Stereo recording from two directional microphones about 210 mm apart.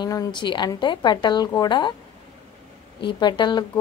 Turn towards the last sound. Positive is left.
turn(degrees=20)  # may be behind; listen again after turning